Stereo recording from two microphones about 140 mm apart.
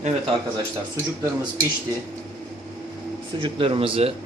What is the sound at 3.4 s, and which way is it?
Speech, 40° right (ahead or behind).